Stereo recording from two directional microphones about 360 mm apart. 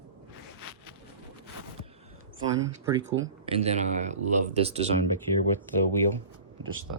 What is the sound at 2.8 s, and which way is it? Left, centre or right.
Speech, centre.